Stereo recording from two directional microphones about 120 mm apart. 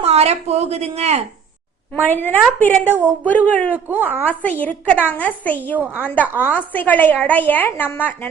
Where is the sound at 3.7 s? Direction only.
15° right (ahead or behind).